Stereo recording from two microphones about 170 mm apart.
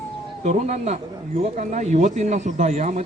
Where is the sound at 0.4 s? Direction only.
40° right (ahead or behind).